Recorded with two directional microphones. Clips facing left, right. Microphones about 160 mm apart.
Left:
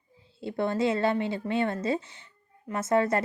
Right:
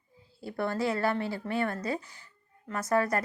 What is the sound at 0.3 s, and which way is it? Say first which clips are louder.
A woman's voice: left 4 dB; 20° left (ahead or behind).